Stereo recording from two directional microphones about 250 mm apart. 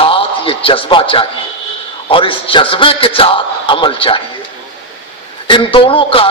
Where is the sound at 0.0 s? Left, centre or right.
Left.